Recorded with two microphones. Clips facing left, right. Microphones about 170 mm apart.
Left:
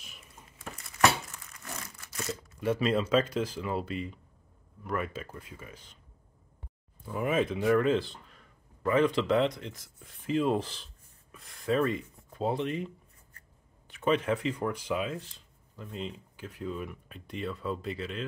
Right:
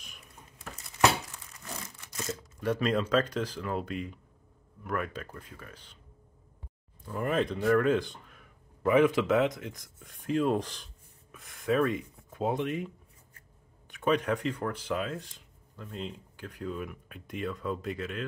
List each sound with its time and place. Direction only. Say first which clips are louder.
1.6 s crumpling: right 1 dB; 15° right (ahead or behind)
2.2 s speech: left 1 dB; 5° left (ahead or behind)
7.1 s speech: left 1 dB; 5° left (ahead or behind)
8.8 s speech: right 2 dB; 10° right (ahead or behind)
13.9 s speech: even; centre (ahead or behind)